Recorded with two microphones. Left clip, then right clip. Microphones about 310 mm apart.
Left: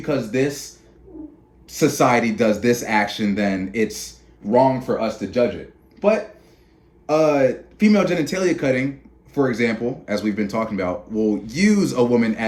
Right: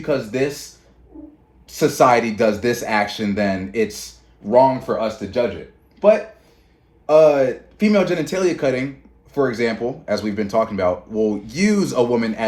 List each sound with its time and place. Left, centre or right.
0.0 s speech: centre
1.6 s speech: centre